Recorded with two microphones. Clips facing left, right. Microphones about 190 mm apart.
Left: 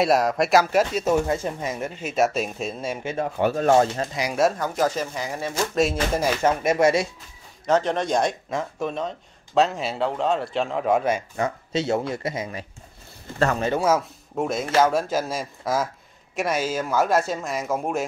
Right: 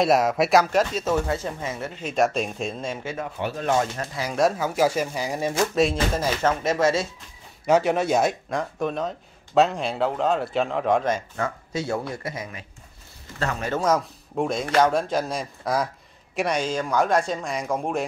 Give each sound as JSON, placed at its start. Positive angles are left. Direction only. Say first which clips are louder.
{"t": 0.0, "sound": "speech", "louder": "even", "side_deg": 0}
{"t": 2.1, "sound": "speech", "louder": "even", "side_deg": 5}
{"t": 3.3, "sound": "speech", "louder": "left 6 dB", "side_deg": 45}
{"t": 4.0, "sound": "speech", "louder": "left 3 dB", "side_deg": 15}
{"t": 4.4, "sound": "speech", "louder": "right 1 dB", "side_deg": -5}
{"t": 6.1, "sound": "speech", "louder": "left 2 dB", "side_deg": 10}
{"t": 7.6, "sound": "a man's voice", "louder": "right 2 dB", "side_deg": -10}
{"t": 13.7, "sound": "speech", "louder": "left 1 dB", "side_deg": 5}